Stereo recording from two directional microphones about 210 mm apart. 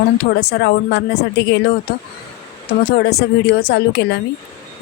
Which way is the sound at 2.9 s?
50° left (ahead or behind).